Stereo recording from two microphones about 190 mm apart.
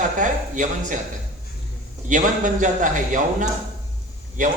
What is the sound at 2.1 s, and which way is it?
A man's voice, 40° right (ahead or behind).